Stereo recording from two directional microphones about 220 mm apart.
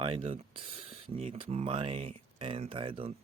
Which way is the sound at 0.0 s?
25° right (ahead or behind).